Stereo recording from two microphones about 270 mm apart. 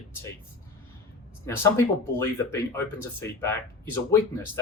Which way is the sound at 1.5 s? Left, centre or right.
Centre.